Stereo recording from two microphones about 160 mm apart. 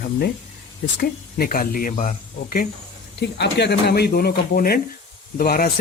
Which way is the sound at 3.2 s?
90° left.